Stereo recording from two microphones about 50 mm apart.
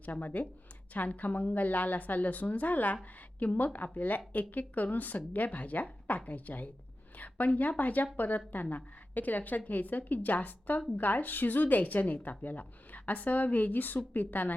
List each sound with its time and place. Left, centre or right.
0.0 s a woman's voice: left